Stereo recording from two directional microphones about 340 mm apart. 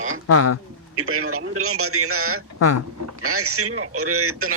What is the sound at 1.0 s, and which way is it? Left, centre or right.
A man's voice, right.